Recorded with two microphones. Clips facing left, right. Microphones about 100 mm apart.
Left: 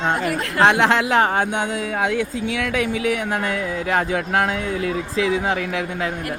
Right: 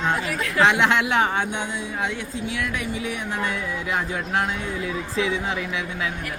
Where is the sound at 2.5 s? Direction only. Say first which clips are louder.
Left 3 dB; 90° left; by 3.7 s 50° left (ahead or behind).